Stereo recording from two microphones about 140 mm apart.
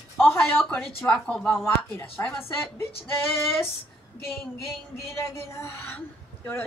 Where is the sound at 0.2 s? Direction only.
15° left (ahead or behind).